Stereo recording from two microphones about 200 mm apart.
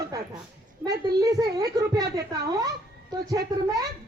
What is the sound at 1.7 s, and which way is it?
Speech, 20° right (ahead or behind).